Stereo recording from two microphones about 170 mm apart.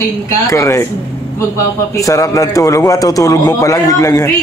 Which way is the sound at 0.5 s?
15° left (ahead or behind).